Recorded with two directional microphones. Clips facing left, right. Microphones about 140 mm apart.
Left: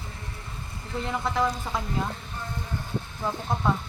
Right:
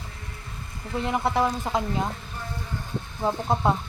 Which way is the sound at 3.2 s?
30° right (ahead or behind).